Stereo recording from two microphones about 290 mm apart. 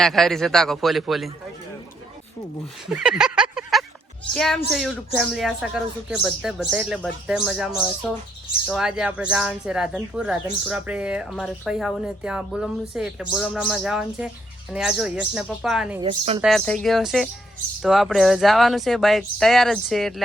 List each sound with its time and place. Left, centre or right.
0.0 s speech: centre
2.9 s a sound: centre
4.4 s speech: centre
16.0 s speech: centre
16.4 s speech: centre